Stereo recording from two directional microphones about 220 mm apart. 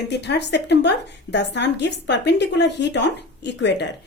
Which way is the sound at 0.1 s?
50° left (ahead or behind).